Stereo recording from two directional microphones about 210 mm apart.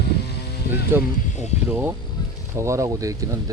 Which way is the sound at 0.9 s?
10° right (ahead or behind).